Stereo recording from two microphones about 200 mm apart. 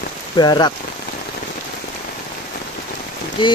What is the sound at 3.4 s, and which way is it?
Speech, 25° left (ahead or behind).